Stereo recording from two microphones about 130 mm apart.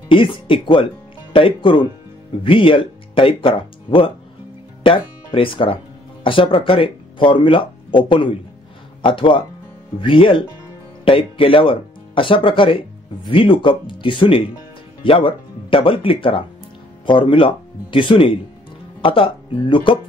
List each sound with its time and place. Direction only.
0.1 s speech: 40° left (ahead or behind)